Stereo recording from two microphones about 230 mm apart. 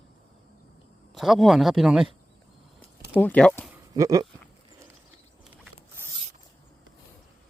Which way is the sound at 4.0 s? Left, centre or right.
Centre.